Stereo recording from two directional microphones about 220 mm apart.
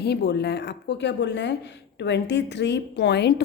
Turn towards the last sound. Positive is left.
turn(degrees=50)  # may be behind; listen again after turning